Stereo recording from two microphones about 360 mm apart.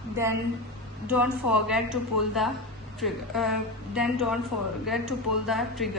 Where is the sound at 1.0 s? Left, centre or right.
Centre.